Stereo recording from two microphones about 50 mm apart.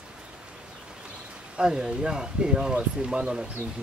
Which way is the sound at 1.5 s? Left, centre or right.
Centre.